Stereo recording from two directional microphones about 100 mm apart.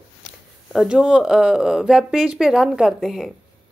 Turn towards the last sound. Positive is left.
turn(degrees=-5)  # may be behind; listen again after turning